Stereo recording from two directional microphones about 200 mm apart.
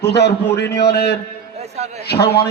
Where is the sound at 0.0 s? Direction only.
55° left (ahead or behind).